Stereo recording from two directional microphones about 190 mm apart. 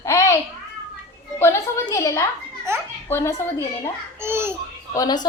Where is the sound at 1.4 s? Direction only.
15° left (ahead or behind).